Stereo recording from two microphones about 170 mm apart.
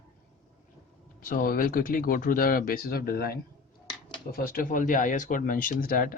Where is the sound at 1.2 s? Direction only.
55° left (ahead or behind).